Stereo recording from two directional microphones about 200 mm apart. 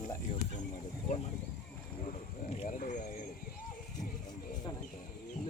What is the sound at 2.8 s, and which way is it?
Speech, 40° left (ahead or behind).